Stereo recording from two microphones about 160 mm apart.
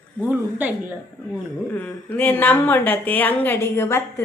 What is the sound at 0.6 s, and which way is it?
Speech, 10° right (ahead or behind).